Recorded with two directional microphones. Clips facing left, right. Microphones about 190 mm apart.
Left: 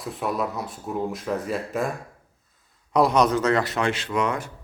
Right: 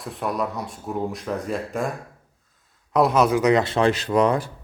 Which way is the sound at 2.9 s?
Centre (ahead or behind).